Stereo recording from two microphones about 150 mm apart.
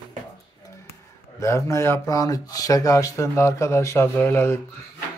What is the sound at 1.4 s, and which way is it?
Speech, 20° left (ahead or behind).